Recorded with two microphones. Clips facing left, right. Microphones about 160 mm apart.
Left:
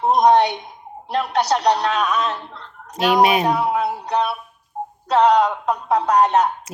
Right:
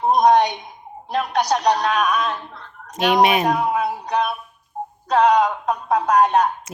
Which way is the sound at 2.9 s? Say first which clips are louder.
Left 1 dB; 35° left (ahead or behind).